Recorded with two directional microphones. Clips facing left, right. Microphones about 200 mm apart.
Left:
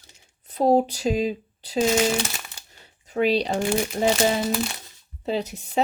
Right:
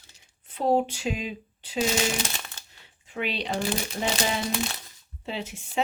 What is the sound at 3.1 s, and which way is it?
Speech, 40° left (ahead or behind).